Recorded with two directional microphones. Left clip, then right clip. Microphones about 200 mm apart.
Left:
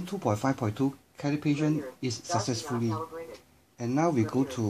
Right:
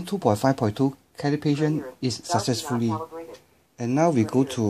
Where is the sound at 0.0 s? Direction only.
50° right (ahead or behind).